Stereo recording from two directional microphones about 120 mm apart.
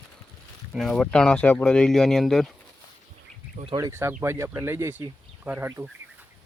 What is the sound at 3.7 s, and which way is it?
Speech, 25° right (ahead or behind).